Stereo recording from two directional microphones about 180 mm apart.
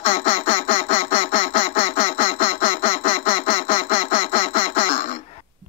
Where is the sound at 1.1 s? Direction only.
30° left (ahead or behind).